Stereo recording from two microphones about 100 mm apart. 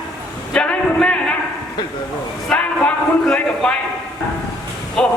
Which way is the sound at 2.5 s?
10° left (ahead or behind).